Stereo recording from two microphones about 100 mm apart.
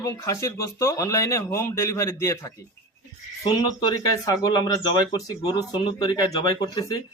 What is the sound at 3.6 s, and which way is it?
Speech, 40° left (ahead or behind).